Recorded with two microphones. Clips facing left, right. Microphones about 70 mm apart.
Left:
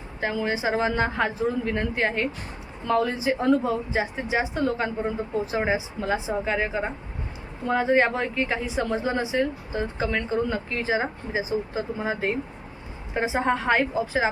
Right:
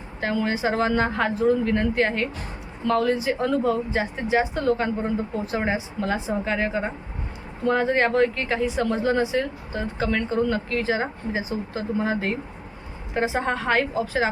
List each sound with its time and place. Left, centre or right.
0.2 s a woman's voice: centre
6.1 s a woman's voice: centre
6.5 s a woman's voice: centre